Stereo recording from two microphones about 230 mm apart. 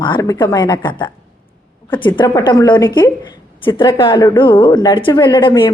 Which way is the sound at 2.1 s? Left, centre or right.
Centre.